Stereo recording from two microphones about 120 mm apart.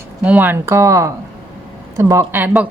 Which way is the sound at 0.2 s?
15° right (ahead or behind).